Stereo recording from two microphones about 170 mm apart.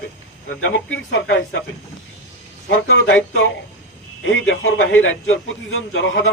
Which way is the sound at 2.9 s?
90° left.